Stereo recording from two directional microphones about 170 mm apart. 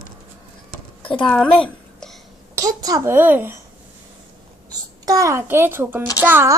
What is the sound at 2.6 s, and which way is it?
A child's voice, 20° right (ahead or behind).